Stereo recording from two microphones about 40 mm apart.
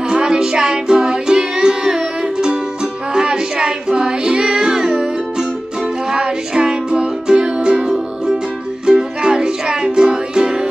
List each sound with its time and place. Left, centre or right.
0.1 s music: centre